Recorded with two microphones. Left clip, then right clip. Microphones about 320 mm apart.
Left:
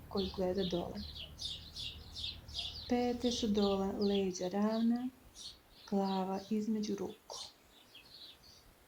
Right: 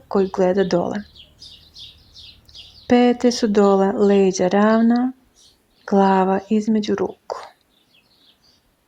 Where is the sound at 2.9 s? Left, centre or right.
Left.